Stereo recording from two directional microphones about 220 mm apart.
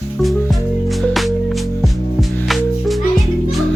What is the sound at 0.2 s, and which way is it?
Music, centre (ahead or behind).